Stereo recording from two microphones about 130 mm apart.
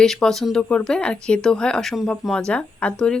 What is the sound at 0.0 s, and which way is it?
Speech, 5° left (ahead or behind).